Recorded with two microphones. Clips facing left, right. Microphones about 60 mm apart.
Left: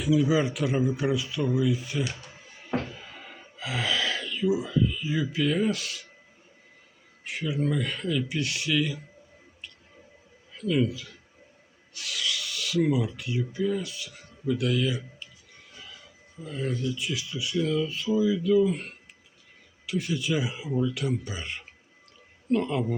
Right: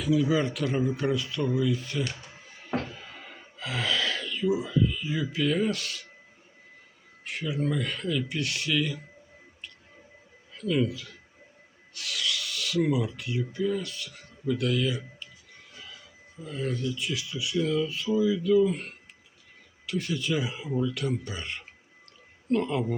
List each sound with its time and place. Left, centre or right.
0.0 s speech: centre
2.2 s gasp: centre
7.3 s speech: centre
10.5 s speech: centre
11.9 s filing: centre
15.7 s train: centre
16.4 s speech: centre